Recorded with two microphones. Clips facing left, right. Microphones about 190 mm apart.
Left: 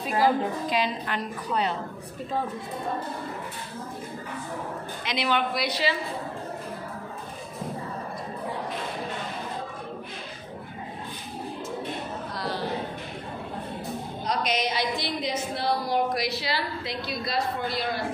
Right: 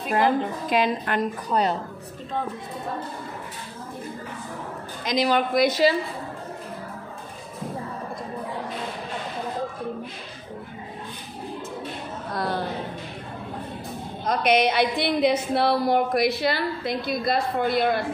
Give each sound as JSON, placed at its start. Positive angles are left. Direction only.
{"t": 0.7, "sound": "a woman's voice", "side_deg": -55}
{"t": 5.0, "sound": "speech", "side_deg": -40}
{"t": 12.3, "sound": "a sound", "side_deg": -55}
{"t": 14.2, "sound": "a woman's voice", "side_deg": -55}